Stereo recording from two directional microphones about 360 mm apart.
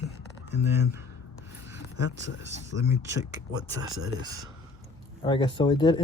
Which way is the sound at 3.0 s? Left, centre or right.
Centre.